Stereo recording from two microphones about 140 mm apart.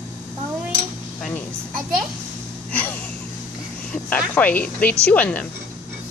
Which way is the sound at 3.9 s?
10° left (ahead or behind).